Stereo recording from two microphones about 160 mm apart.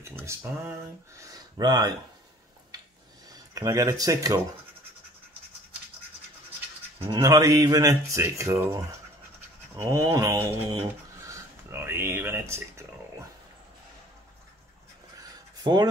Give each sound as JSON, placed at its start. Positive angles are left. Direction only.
{"t": 0.0, "sound": "speech", "side_deg": -15}
{"t": 3.3, "sound": "speech", "side_deg": -20}
{"t": 7.1, "sound": "speech", "side_deg": -20}
{"t": 15.1, "sound": "a sound", "side_deg": -25}